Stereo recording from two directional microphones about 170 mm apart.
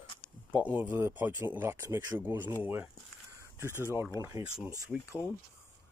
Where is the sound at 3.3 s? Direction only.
15° right (ahead or behind).